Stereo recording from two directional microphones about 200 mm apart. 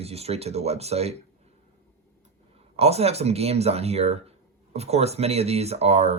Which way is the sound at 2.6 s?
30° right (ahead or behind).